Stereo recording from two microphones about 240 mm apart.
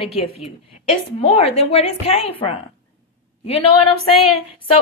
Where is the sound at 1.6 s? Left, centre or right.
Left.